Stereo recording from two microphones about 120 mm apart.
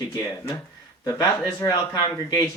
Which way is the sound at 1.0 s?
30° left (ahead or behind).